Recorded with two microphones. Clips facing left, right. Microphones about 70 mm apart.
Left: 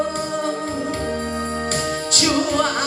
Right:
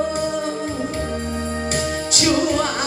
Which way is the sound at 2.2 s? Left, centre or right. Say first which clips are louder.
Right 1 dB; left.